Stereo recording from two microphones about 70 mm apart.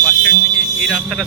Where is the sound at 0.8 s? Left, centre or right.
Centre.